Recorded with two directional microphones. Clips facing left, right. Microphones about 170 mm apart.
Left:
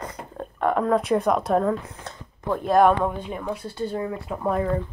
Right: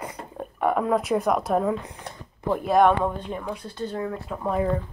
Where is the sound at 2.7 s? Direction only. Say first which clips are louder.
Left 1 dB; centre (ahead or behind).